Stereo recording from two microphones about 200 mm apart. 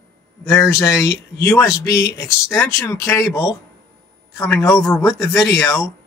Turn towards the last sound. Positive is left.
turn(degrees=15)  # may be behind; listen again after turning